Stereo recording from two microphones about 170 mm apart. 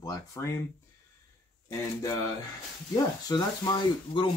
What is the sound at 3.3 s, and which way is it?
Speech, 20° left (ahead or behind).